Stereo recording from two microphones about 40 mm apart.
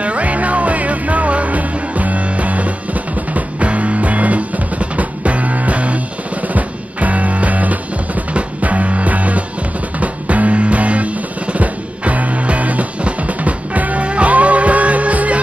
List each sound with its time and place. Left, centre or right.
0.0 s music: right